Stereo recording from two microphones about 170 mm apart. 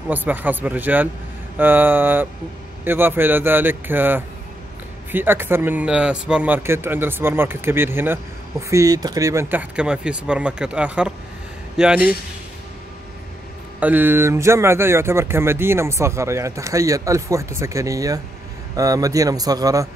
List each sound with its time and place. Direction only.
0.1 s speech: 10° right (ahead or behind)
13.7 s a man's voice: 10° right (ahead or behind)